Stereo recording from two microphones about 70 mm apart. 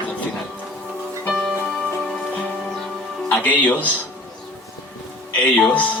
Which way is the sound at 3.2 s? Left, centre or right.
Left.